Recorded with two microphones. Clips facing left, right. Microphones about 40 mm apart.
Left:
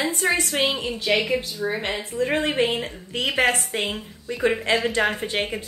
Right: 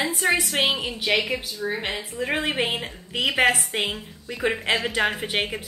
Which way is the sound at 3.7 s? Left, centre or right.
Right.